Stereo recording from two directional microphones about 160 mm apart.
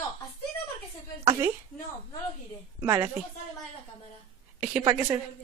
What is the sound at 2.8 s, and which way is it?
Speech, 20° right (ahead or behind).